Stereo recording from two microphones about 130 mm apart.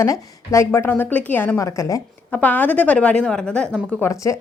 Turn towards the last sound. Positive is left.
turn(degrees=25)  # may be behind; listen again after turning